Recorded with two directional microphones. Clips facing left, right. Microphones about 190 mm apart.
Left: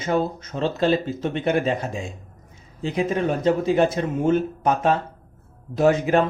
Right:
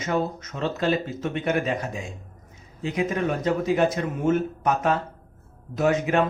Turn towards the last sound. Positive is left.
turn(degrees=35)  # may be behind; listen again after turning